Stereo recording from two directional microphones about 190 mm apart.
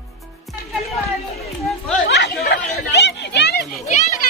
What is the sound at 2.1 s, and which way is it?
Chatter, 65° left (ahead or behind).